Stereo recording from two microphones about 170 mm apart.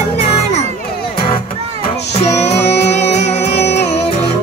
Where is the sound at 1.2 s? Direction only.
30° left (ahead or behind).